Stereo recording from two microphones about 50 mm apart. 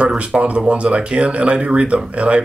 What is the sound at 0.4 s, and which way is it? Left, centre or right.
Speech, right.